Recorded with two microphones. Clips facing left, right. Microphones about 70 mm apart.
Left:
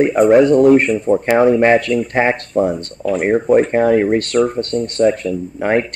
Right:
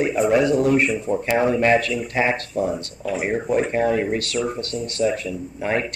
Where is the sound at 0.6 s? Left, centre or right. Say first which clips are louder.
Left 8 dB; left.